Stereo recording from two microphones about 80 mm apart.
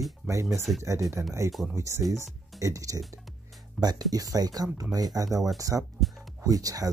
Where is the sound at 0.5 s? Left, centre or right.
Centre.